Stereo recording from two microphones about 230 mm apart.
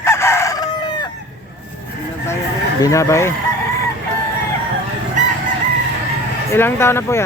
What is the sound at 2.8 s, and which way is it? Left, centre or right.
Speech, centre.